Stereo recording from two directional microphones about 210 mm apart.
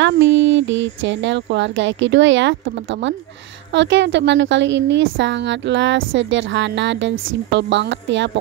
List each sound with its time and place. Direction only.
0.0 s a woman's voice: 60° right (ahead or behind)